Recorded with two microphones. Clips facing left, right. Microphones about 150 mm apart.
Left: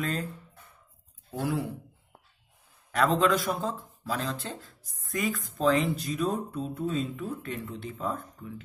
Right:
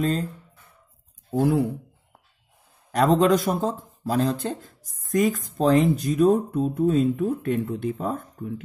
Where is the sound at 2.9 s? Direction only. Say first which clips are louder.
Right 6 dB; 40° right (ahead or behind).